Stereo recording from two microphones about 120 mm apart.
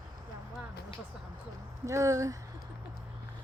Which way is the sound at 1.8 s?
25° right (ahead or behind).